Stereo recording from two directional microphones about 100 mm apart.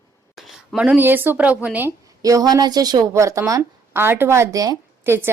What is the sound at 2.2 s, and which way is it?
A woman's voice, 40° right (ahead or behind).